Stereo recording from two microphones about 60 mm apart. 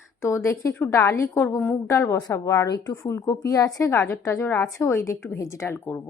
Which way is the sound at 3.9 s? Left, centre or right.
Left.